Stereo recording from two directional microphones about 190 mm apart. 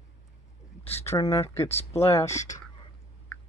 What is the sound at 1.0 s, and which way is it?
Speech, 15° left (ahead or behind).